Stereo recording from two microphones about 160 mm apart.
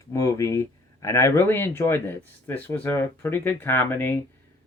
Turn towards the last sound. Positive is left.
turn(degrees=15)  # may be behind; listen again after turning